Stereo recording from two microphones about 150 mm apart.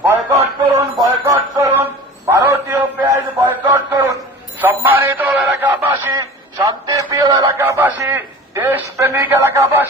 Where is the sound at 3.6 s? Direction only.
25° right (ahead or behind).